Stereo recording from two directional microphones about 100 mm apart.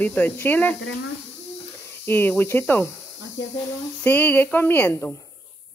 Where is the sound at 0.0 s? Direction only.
15° left (ahead or behind).